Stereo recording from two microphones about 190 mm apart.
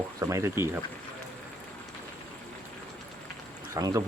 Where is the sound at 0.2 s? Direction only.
15° right (ahead or behind).